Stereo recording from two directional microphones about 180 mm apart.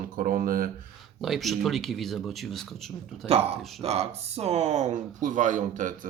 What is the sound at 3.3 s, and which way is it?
Speech, 35° right (ahead or behind).